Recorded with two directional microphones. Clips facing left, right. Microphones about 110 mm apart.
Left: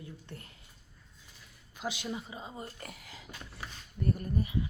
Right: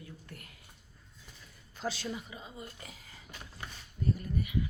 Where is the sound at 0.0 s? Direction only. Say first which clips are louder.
Left 2 dB; 30° left (ahead or behind).